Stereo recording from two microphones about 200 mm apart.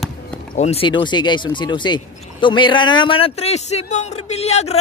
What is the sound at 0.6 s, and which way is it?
A man's voice, 30° left (ahead or behind).